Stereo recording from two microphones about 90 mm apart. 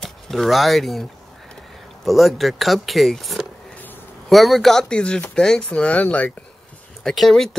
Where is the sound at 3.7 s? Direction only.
20° left (ahead or behind).